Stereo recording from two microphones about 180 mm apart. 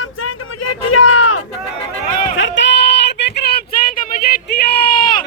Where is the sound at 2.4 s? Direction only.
85° left.